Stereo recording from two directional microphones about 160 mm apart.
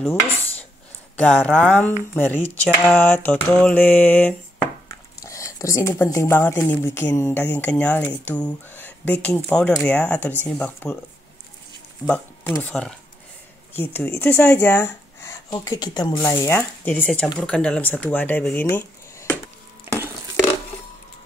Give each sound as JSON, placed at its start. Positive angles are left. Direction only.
{"t": 1.1, "sound": "speech", "side_deg": 10}
{"t": 12.1, "sound": "speech", "side_deg": 10}
{"t": 19.9, "sound": "stir", "side_deg": -15}